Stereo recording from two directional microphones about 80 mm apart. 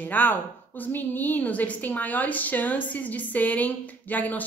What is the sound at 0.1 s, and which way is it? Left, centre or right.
A woman's voice, left.